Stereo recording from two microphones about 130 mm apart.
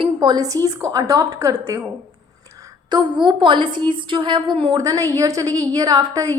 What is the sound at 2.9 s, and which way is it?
A woman's voice, 35° right (ahead or behind).